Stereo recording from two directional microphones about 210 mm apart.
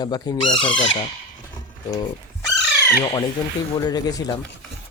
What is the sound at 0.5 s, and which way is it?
Speech, 5° left (ahead or behind).